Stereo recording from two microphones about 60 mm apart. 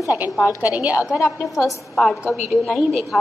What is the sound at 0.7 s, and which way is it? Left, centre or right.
Speech, right.